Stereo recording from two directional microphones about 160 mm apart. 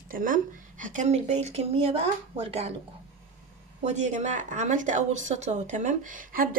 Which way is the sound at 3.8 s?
45° right (ahead or behind).